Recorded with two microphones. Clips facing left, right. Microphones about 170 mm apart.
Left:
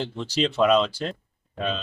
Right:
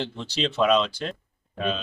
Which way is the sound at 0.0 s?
5° left (ahead or behind).